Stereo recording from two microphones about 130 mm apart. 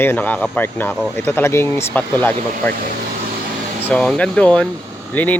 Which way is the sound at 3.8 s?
10° left (ahead or behind).